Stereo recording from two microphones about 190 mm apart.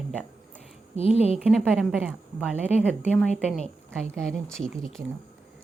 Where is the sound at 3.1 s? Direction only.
5° left (ahead or behind).